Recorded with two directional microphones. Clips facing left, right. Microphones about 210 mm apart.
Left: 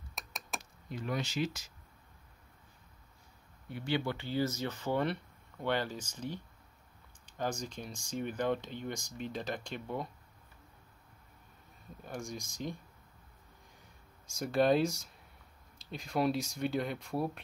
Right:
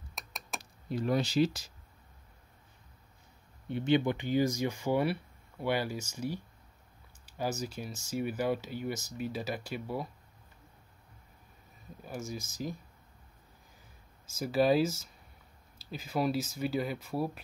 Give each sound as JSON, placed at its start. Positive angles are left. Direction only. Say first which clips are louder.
{"t": 0.1, "sound": "a sound", "louder": "even", "side_deg": 0}
{"t": 0.6, "sound": "speech", "louder": "right 8 dB", "side_deg": -35}
{"t": 3.6, "sound": "speech", "louder": "right 7 dB", "side_deg": -25}
{"t": 12.0, "sound": "speech", "louder": "right 2 dB", "side_deg": -5}
{"t": 14.2, "sound": "speech", "louder": "right 1 dB", "side_deg": -5}